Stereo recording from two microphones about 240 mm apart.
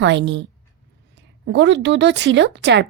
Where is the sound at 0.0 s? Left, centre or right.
Right.